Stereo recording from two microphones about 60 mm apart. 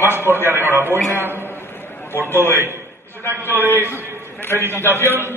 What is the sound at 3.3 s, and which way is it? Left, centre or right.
Speech, right.